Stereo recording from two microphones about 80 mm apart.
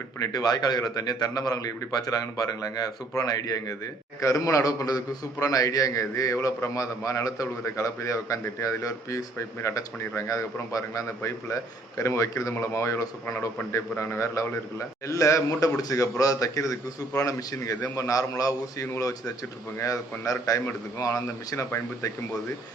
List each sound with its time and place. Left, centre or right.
0.2 s a man's voice: left